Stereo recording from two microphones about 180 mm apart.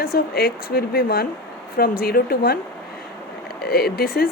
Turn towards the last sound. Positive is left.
turn(degrees=60)  # may be behind; listen again after turning